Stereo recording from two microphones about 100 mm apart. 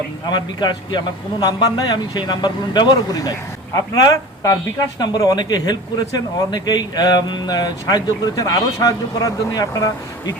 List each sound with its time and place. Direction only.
0.3 s a man's voice: 45° left (ahead or behind)